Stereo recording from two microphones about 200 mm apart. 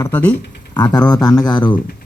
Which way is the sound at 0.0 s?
10° left (ahead or behind).